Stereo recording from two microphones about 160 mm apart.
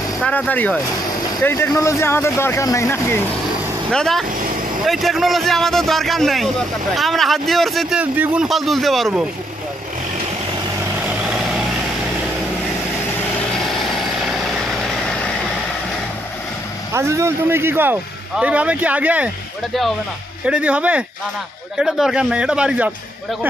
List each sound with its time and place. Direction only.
0.2 s speech: 10° left (ahead or behind)
3.9 s speech: centre (ahead or behind)
11.1 s vehicle: 5° right (ahead or behind)
13.5 s vehicle: centre (ahead or behind)
16.9 s speech: 15° right (ahead or behind)